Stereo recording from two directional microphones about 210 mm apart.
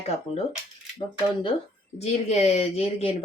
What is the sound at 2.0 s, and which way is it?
Speech, 30° left (ahead or behind).